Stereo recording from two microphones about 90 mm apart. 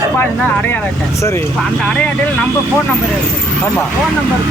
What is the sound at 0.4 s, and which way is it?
Speech, 15° left (ahead or behind).